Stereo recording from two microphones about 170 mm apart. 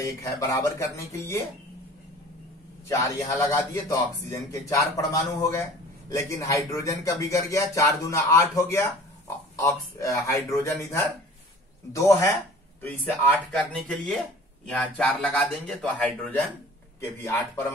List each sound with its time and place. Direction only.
0.2 s a man's voice: 20° left (ahead or behind)
2.9 s a man's voice: 20° left (ahead or behind)